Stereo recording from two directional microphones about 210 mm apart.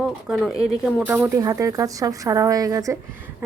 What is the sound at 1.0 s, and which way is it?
Speech, 10° right (ahead or behind).